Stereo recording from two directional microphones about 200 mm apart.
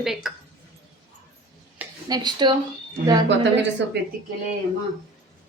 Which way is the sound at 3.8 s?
65° right (ahead or behind).